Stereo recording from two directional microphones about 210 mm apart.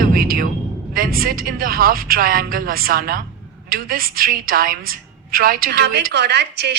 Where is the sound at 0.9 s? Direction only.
45° right (ahead or behind).